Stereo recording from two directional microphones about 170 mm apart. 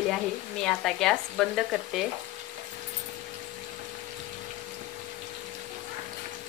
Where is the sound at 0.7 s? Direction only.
Centre (ahead or behind).